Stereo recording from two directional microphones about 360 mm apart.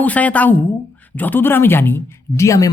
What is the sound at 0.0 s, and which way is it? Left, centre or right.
Speech, centre.